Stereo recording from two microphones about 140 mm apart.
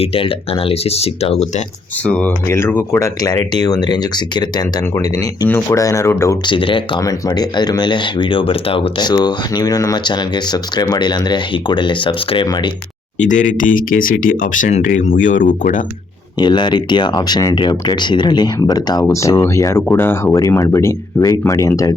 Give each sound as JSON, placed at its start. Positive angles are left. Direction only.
{"t": 0.0, "sound": "speech", "side_deg": 40}
{"t": 2.0, "sound": "speech", "side_deg": 10}
{"t": 6.4, "sound": "speech", "side_deg": 35}
{"t": 7.0, "sound": "speech", "side_deg": 25}
{"t": 13.1, "sound": "speech", "side_deg": 60}
{"t": 16.4, "sound": "speech", "side_deg": 30}